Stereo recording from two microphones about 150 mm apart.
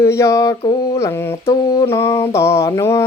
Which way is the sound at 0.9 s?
15° left (ahead or behind).